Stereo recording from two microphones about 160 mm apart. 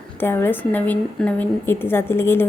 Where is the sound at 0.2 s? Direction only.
15° left (ahead or behind).